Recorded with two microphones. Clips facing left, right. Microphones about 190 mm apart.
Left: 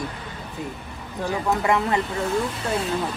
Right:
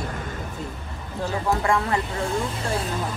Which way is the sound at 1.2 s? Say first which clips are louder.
Left 1 dB; 20° left (ahead or behind).